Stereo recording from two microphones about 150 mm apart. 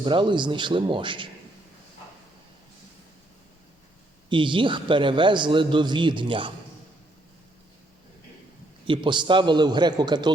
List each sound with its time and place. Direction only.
0.0 s a man's voice: 30° right (ahead or behind)
4.3 s a man's voice: 35° right (ahead or behind)
8.9 s a man's voice: 30° right (ahead or behind)